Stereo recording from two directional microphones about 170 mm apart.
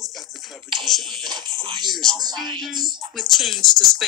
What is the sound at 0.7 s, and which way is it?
Speech, centre (ahead or behind).